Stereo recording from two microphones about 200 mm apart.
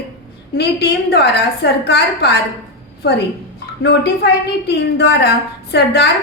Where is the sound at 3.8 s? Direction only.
55° left (ahead or behind).